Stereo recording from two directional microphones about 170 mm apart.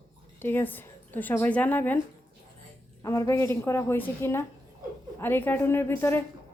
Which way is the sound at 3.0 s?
20° left (ahead or behind).